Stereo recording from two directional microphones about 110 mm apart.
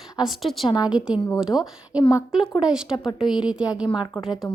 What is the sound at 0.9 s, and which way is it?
A woman's voice, 10° right (ahead or behind).